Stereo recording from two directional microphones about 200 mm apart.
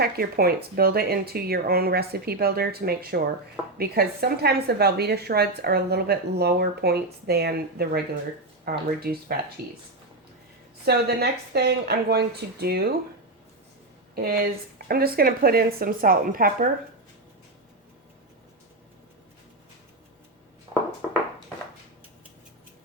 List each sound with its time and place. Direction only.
0.0 s a woman's voice: 50° right (ahead or behind)
10.8 s a woman's voice: 55° right (ahead or behind)
14.2 s a woman's voice: 45° right (ahead or behind)
20.7 s a sound: 25° right (ahead or behind)